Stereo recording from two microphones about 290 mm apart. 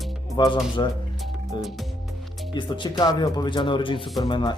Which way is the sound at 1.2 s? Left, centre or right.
Centre.